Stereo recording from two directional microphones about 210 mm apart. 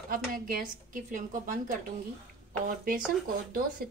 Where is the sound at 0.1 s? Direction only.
45° right (ahead or behind).